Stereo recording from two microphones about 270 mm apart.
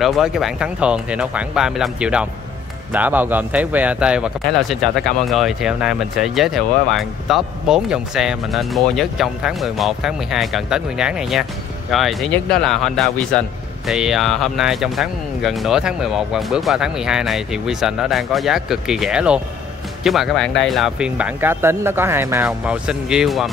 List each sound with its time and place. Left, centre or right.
0.0 s speech: centre